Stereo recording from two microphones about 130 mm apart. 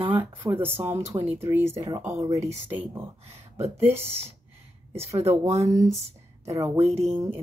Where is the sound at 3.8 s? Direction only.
15° right (ahead or behind).